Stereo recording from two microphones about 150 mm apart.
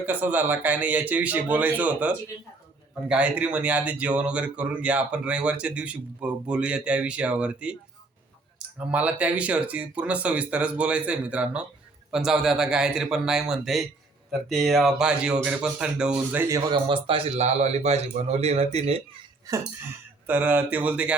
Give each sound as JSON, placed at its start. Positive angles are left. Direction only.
{"t": 0.0, "sound": "speech", "side_deg": -10}
{"t": 16.7, "sound": "a man's voice", "side_deg": -35}
{"t": 20.2, "sound": "speech", "side_deg": -10}